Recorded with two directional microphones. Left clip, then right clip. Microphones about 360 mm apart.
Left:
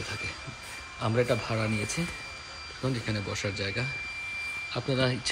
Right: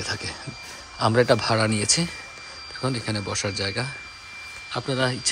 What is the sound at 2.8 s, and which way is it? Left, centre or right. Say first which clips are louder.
Speech: right 5 dB; centre.